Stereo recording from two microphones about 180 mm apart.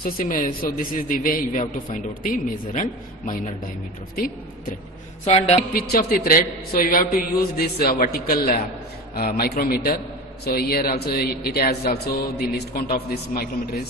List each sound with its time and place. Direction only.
0.0 s a man's voice: 50° left (ahead or behind)
5.2 s a man's voice: 35° left (ahead or behind)
5.8 s a man's voice: 55° left (ahead or behind)